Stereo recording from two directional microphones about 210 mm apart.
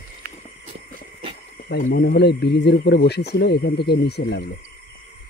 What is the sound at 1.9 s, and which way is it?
Speech, 50° left (ahead or behind).